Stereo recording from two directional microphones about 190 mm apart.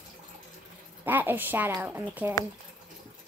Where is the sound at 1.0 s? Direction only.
10° right (ahead or behind).